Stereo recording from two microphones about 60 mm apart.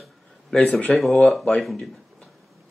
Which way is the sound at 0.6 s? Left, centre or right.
Left.